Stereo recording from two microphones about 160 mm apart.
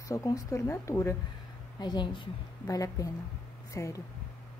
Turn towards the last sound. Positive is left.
turn(degrees=20)  # may be behind; listen again after turning